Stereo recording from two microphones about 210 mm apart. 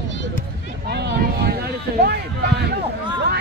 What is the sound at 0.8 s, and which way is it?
Speech, 50° right (ahead or behind).